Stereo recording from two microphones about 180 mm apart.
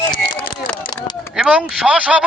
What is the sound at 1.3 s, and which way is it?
Speech, 5° right (ahead or behind).